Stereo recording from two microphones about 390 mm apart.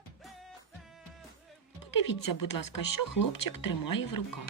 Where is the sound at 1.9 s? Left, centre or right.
Left.